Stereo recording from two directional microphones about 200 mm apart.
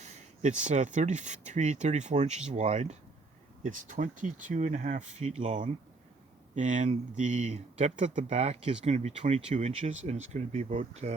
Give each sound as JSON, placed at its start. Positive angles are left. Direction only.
{"t": 0.0, "sound": "speech", "side_deg": -35}